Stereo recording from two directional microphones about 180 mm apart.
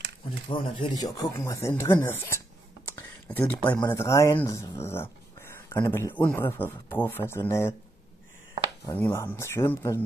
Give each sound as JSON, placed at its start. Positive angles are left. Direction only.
{"t": 0.5, "sound": "speech", "side_deg": 25}
{"t": 8.9, "sound": "speech", "side_deg": 15}